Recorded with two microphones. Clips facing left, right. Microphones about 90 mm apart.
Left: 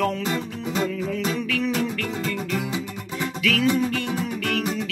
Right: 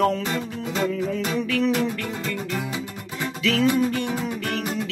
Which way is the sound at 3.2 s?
25° right (ahead or behind).